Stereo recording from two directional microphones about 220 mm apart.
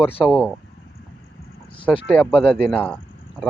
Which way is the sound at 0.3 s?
Centre (ahead or behind).